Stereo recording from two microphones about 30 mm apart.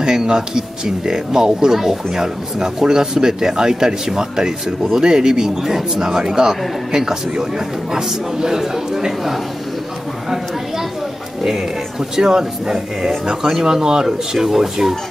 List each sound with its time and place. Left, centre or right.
0.0 s speech: right
2.2 s speech: right
11.4 s speech: centre